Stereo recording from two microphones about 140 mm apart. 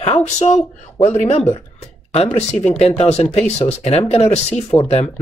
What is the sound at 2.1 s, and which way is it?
Speech, 50° left (ahead or behind).